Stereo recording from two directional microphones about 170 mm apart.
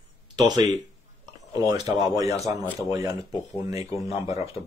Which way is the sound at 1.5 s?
25° right (ahead or behind).